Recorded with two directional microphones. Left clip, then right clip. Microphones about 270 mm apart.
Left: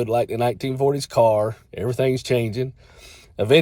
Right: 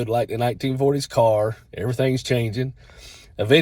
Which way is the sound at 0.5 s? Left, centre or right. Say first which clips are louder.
Even; left.